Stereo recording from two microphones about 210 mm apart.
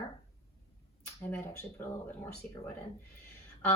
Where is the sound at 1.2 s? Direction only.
10° left (ahead or behind).